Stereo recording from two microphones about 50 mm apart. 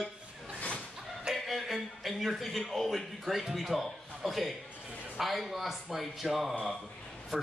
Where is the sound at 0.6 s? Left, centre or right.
Left.